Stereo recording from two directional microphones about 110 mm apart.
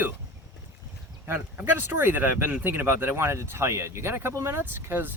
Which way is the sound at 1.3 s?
20° right (ahead or behind).